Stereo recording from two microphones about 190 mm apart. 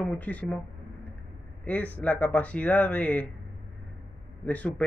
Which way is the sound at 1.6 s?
10° left (ahead or behind).